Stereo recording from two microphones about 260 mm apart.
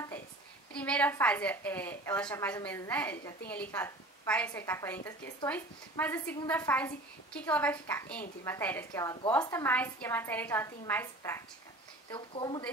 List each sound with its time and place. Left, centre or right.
0.7 s a woman's voice: centre